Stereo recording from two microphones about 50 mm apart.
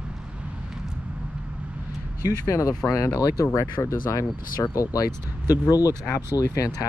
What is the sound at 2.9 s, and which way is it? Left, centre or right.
Speech, left.